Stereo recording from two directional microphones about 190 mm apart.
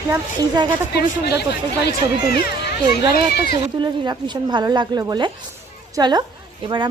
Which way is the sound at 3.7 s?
25° right (ahead or behind).